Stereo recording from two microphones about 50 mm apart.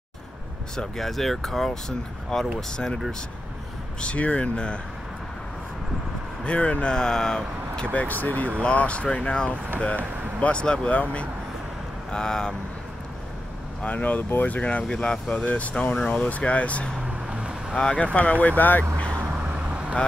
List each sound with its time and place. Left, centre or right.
0.7 s speech: centre
4.0 s speech: left
6.4 s speech: left
10.9 s speech: left
12.1 s speech: centre
13.8 s speech: left
17.3 s boat: right
17.7 s speech: left